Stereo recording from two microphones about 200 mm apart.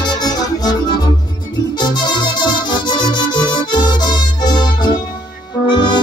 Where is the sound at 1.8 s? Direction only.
20° left (ahead or behind).